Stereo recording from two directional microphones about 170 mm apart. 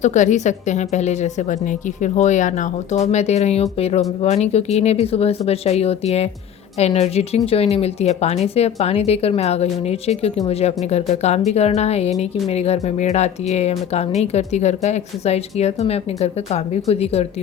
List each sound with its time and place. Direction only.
0.0 s a woman's voice: 45° left (ahead or behind)